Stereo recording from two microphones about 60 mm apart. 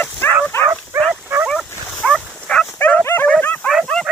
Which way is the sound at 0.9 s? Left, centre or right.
Right.